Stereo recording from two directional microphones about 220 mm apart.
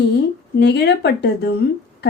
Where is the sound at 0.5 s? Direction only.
50° left (ahead or behind).